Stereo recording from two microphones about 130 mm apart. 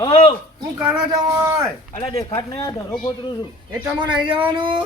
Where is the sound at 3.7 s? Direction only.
35° right (ahead or behind).